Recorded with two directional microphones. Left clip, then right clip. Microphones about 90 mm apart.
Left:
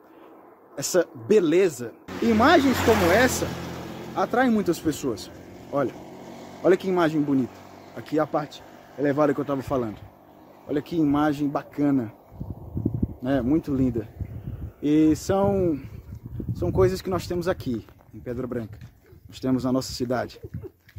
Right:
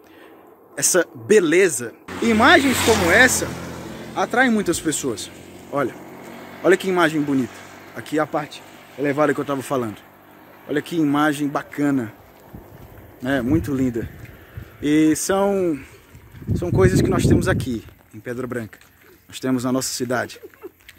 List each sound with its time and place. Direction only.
0.7 s speech: 5° right (ahead or behind)
2.2 s speech: 15° left (ahead or behind)
5.9 s vehicle: 30° left (ahead or behind)
6.7 s speech: centre (ahead or behind)
7.5 s a sound: 20° left (ahead or behind)
8.0 s speech: centre (ahead or behind)
8.3 s speech: 15° left (ahead or behind)
9.3 s speech: 5° right (ahead or behind)
13.2 s speech: 5° right (ahead or behind)
16.5 s speech: 15° left (ahead or behind); by 20.3 s centre (ahead or behind)